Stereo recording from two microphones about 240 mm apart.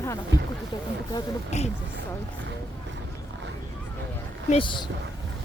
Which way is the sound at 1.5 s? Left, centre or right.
Left.